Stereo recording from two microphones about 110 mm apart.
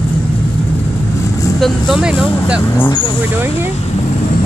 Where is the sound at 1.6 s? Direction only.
5° right (ahead or behind).